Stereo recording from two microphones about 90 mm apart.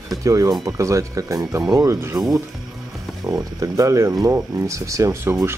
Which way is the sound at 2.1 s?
5° right (ahead or behind).